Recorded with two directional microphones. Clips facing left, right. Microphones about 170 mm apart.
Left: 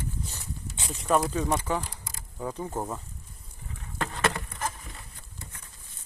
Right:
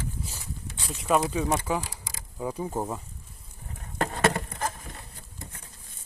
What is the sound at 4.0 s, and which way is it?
Patter, 45° right (ahead or behind).